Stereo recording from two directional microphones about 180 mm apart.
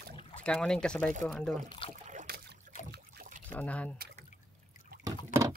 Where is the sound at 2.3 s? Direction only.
60° right (ahead or behind).